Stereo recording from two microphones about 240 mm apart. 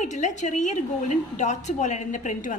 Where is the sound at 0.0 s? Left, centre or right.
Left.